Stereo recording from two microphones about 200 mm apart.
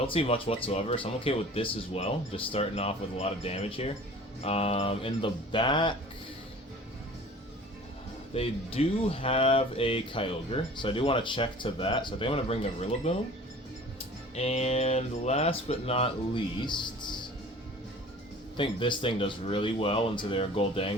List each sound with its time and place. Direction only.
0.1 s speech: 25° left (ahead or behind)
8.3 s speech: 30° left (ahead or behind)
14.3 s speech: 30° left (ahead or behind)
18.5 s speech: 25° left (ahead or behind)